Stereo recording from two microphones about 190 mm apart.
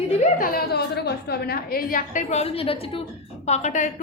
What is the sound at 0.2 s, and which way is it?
A woman's voice, 45° left (ahead or behind).